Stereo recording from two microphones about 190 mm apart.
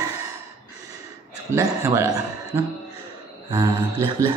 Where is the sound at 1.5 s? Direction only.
15° right (ahead or behind).